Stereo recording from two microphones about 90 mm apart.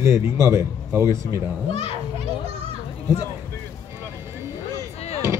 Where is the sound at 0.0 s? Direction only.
30° right (ahead or behind).